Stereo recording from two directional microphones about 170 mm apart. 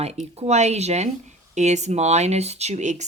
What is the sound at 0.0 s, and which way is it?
Speech, 40° right (ahead or behind).